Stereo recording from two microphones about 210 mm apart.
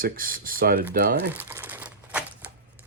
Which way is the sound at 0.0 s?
40° right (ahead or behind).